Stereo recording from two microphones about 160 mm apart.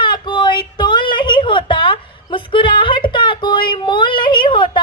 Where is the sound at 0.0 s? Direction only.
30° left (ahead or behind).